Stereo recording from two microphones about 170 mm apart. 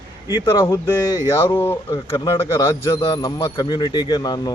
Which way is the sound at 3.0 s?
25° left (ahead or behind).